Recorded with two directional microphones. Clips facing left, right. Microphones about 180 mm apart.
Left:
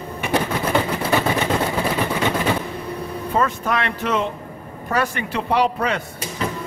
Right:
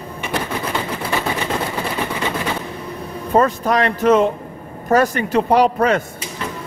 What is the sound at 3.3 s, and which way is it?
A man's voice, 35° right (ahead or behind).